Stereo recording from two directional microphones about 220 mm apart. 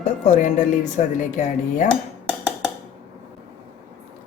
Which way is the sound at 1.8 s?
5° left (ahead or behind).